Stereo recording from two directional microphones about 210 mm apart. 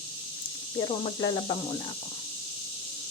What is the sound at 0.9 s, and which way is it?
Speech, 25° left (ahead or behind).